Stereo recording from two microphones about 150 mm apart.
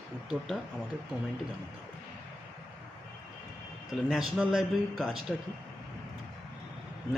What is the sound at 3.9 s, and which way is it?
Speech, 5° right (ahead or behind).